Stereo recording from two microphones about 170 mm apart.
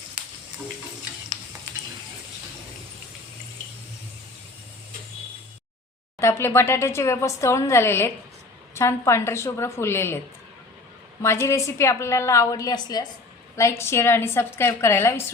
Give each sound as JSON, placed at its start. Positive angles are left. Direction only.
{"t": 6.1, "sound": "speech", "side_deg": 15}
{"t": 11.2, "sound": "speech", "side_deg": 15}